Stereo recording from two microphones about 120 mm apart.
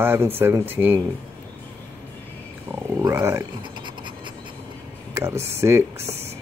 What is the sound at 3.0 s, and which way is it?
Speech, 20° right (ahead or behind).